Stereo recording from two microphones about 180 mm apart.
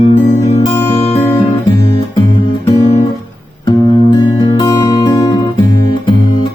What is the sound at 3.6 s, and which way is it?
Music, 25° left (ahead or behind).